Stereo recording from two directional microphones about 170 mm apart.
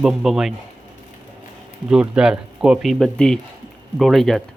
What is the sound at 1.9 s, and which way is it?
Speech, 5° right (ahead or behind).